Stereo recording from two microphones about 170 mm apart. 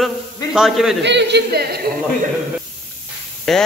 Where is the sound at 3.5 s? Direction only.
Centre (ahead or behind).